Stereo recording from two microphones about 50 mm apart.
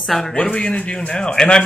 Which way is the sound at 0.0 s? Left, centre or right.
Centre.